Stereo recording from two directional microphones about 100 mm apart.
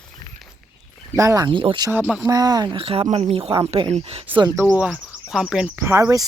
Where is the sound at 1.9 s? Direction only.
15° right (ahead or behind).